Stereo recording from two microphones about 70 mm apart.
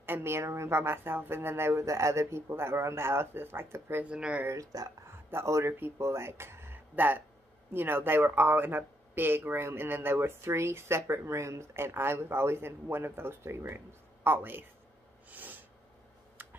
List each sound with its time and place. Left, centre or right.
0.0 s speech: right
4.0 s speech: centre
4.5 s speech: right
5.0 s a man's voice: right
15.2 s snort: right